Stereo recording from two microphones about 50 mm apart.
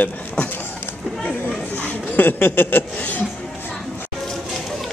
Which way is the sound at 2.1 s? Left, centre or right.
Left.